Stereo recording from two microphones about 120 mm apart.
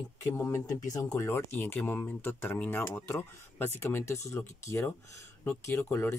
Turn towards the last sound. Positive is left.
turn(degrees=20)  # may be behind; listen again after turning